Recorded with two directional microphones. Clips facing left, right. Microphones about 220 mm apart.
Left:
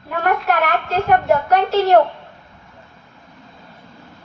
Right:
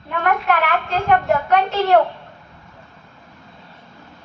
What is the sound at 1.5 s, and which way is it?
Speech, 40° left (ahead or behind).